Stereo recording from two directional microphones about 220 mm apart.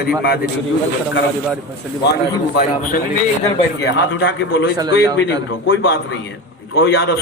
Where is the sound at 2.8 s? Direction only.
35° left (ahead or behind).